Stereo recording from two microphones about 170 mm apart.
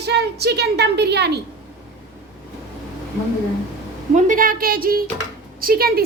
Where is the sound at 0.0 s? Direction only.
75° right (ahead or behind).